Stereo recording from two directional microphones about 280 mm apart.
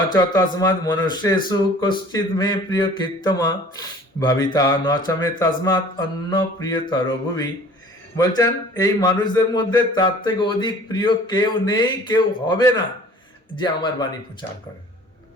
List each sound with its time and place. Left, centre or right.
0.1 s speech: centre
8.4 s speech: centre